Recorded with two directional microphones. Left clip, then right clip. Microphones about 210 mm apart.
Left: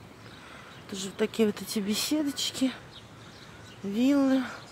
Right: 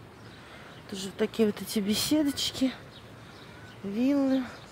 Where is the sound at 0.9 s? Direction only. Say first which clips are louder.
Even; 5° left (ahead or behind).